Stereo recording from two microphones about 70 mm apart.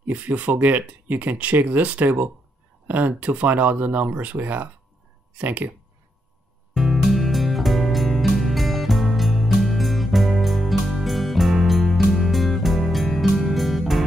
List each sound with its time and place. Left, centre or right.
0.0 s speech: right
6.7 s music: centre